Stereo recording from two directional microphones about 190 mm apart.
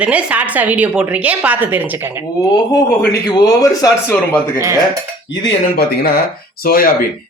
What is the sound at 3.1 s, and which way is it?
A man's voice, 20° left (ahead or behind).